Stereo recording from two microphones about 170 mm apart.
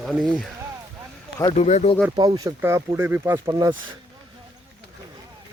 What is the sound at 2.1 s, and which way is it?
A man's voice, 25° right (ahead or behind).